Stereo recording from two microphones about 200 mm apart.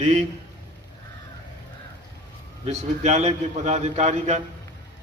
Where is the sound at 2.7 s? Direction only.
35° right (ahead or behind).